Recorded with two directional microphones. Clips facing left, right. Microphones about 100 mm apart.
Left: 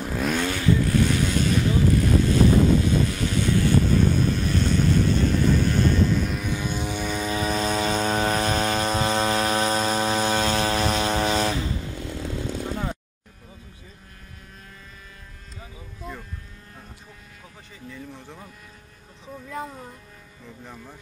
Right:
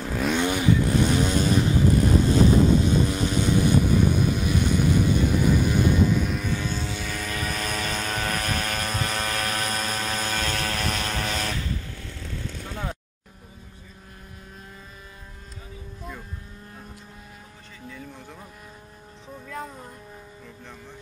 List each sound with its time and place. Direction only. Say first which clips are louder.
0.1 s vehicle: right 1 dB; centre (ahead or behind)
0.4 s vehicle: right 1 dB; 15° right (ahead or behind); by 6.5 s centre (ahead or behind)
6.5 s vehicle: left 1 dB; 15° left (ahead or behind)
17.8 s a sound: left 1 dB; centre (ahead or behind)
19.6 s music: left 2 dB; centre (ahead or behind)